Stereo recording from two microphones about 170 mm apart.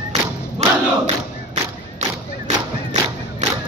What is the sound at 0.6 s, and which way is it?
Battle cry, 40° right (ahead or behind).